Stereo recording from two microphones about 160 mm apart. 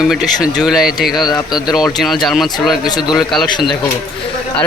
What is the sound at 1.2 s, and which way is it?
Speech, 25° left (ahead or behind).